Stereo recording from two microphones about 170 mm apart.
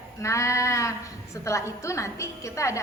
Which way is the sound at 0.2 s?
15° left (ahead or behind).